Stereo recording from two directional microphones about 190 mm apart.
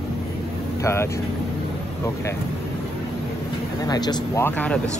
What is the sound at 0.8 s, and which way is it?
Speech, 15° left (ahead or behind).